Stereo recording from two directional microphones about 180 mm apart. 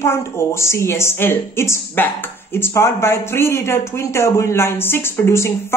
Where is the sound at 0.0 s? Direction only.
15° left (ahead or behind).